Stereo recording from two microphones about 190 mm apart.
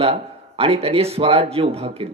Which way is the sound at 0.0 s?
30° right (ahead or behind).